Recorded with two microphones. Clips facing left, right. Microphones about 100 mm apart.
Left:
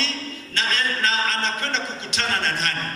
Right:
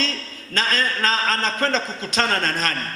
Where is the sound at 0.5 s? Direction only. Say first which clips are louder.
Right 3 dB; 40° right (ahead or behind).